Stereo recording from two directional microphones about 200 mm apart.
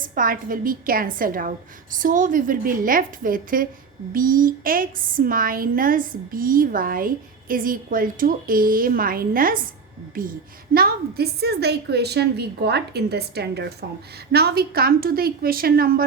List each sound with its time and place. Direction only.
0.1 s a woman's voice: 45° right (ahead or behind)
10.8 s a woman's voice: 50° right (ahead or behind)